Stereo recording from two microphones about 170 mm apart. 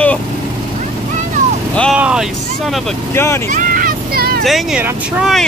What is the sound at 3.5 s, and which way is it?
Vehicle, 50° right (ahead or behind).